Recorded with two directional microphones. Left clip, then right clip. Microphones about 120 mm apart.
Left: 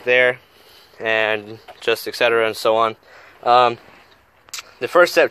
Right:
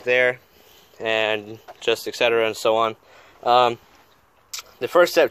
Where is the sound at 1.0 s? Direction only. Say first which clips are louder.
Left 3 dB; 20° right (ahead or behind).